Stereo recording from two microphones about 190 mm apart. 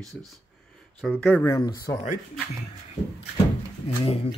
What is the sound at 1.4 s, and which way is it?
Speech, 20° left (ahead or behind).